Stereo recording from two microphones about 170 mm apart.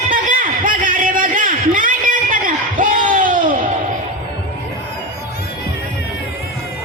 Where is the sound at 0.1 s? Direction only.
55° right (ahead or behind).